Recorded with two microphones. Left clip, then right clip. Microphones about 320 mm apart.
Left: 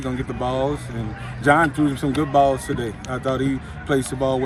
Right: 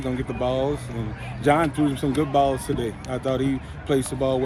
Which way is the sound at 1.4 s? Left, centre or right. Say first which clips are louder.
Left 3 dB; centre.